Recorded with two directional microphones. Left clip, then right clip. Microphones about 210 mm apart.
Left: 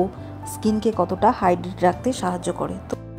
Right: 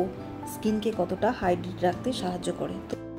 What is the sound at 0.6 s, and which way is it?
A woman's voice, 35° left (ahead or behind).